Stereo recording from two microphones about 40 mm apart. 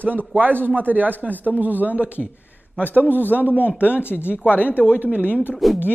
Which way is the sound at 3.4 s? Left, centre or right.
Left.